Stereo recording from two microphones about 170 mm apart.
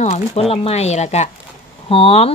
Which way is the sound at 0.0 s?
40° left (ahead or behind).